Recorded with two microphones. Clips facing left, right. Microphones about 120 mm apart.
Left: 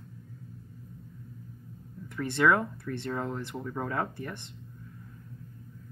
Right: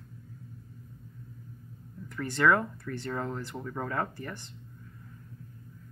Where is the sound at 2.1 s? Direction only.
10° left (ahead or behind).